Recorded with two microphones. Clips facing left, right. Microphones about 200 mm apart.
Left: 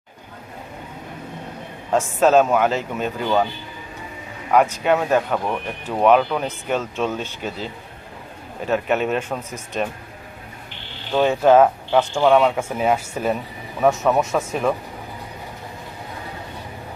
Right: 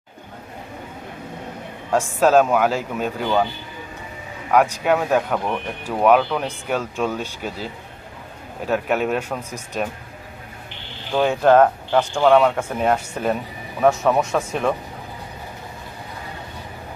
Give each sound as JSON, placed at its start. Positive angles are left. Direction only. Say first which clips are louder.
{"t": 1.9, "sound": "speech", "louder": "even", "side_deg": 0}
{"t": 4.8, "sound": "speech", "louder": "even", "side_deg": 0}
{"t": 11.1, "sound": "speech", "louder": "left 1 dB", "side_deg": 0}